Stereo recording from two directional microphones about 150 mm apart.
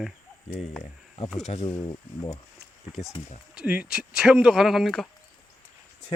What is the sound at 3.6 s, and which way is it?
Speech, 5° right (ahead or behind).